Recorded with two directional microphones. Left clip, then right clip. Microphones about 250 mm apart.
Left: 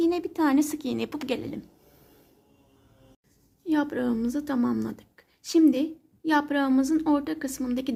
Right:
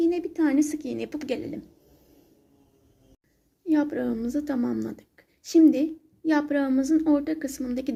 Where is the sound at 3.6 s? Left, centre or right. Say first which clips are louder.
Right 1 dB; centre.